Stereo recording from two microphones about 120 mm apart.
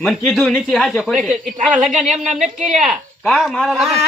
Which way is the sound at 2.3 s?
75° right (ahead or behind).